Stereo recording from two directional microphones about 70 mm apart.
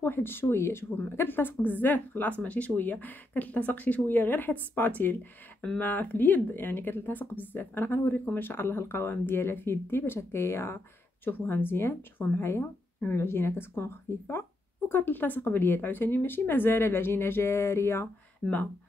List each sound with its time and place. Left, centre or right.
0.0 s speech: left
18.4 s speech: centre